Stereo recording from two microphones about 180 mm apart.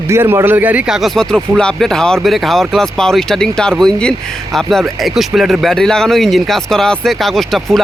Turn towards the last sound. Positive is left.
turn(degrees=0)  # may be behind; listen again after turning